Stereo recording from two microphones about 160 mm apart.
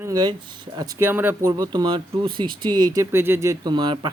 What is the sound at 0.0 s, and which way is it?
Speech, 25° right (ahead or behind).